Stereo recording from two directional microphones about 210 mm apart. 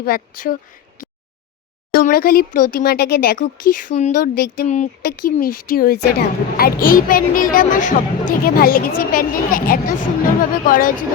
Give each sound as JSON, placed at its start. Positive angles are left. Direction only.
{"t": 0.0, "sound": "speech", "side_deg": 45}
{"t": 1.9, "sound": "speech", "side_deg": 45}